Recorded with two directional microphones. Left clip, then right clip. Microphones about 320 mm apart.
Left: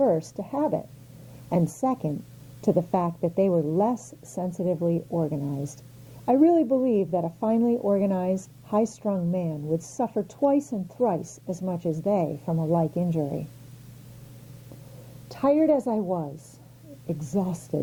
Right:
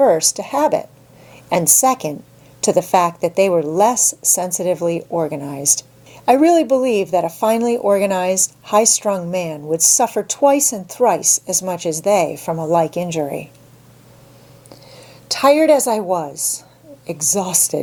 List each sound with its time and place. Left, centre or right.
0.0 s a woman's voice: centre
9.6 s a woman's voice: right
9.8 s a woman's voice: centre
15.3 s a woman's voice: centre